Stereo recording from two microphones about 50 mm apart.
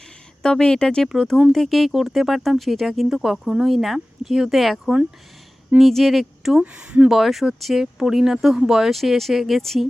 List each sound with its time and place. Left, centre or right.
0.4 s speech: centre
1.0 s speech: centre
5.8 s speech: centre
6.6 s speech: centre
7.1 s speech: centre
8.9 s speech: centre